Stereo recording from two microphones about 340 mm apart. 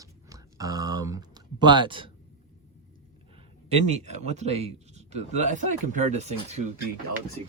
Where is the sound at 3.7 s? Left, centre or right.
Centre.